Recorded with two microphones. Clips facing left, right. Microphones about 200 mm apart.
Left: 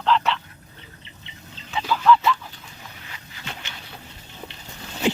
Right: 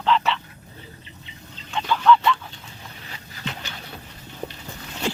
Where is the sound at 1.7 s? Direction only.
5° left (ahead or behind).